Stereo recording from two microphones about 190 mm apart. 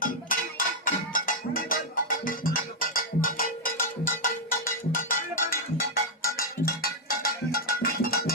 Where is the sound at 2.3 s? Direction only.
45° left (ahead or behind).